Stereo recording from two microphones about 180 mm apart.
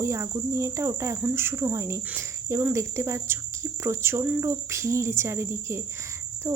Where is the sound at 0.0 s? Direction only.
15° right (ahead or behind).